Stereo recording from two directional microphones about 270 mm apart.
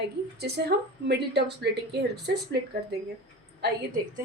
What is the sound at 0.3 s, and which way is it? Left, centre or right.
A woman's voice, right.